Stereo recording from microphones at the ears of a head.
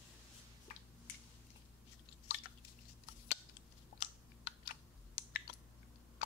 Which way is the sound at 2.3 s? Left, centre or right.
Left.